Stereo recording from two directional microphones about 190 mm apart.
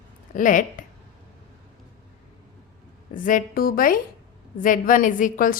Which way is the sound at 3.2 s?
45° left (ahead or behind).